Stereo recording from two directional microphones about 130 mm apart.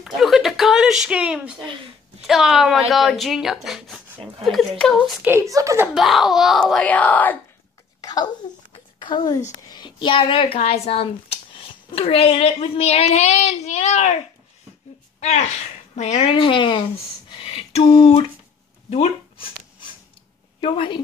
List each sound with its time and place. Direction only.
0.0 s a sound: centre (ahead or behind)
2.2 s speech: 5° right (ahead or behind)
5.2 s a woman's voice: 20° right (ahead or behind)
5.9 s speech: centre (ahead or behind)
6.9 s speech: 10° left (ahead or behind)
8.0 s a sound: 30° left (ahead or behind)
9.0 s a woman's voice: 35° left (ahead or behind)
9.7 s child singing: 35° left (ahead or behind)
10.6 s a woman's voice: 50° left (ahead or behind)
15.1 s a woman's voice: 60° left (ahead or behind)
16.3 s speech: 40° left (ahead or behind)
17.3 s a sound: 45° left (ahead or behind)
18.9 s speech: 55° left (ahead or behind)
20.6 s speech: 40° left (ahead or behind)